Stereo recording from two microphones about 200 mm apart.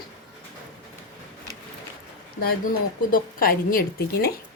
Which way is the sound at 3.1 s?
45° left (ahead or behind).